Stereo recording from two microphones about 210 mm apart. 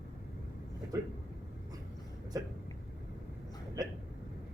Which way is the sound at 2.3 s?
15° right (ahead or behind).